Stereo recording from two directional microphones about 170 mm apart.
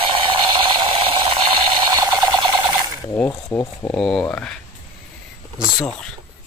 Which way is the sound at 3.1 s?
20° left (ahead or behind).